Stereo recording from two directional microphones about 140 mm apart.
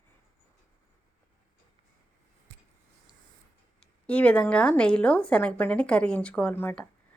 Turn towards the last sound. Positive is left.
turn(degrees=15)  # may be behind; listen again after turning